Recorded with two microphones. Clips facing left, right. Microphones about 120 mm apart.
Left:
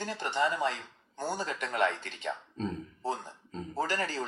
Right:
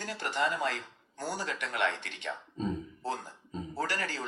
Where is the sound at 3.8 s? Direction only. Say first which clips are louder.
Left 3 dB; 25° left (ahead or behind).